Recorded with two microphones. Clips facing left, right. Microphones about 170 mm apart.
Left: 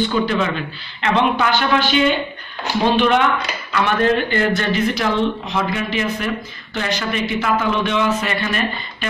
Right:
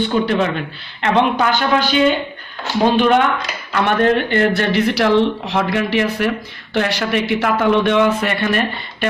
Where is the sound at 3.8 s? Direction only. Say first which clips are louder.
Right 2 dB; 60° right (ahead or behind).